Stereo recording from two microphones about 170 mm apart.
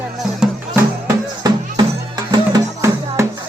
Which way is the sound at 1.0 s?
25° right (ahead or behind).